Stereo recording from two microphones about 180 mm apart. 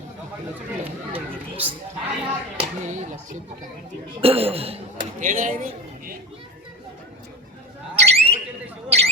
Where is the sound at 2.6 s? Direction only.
40° right (ahead or behind).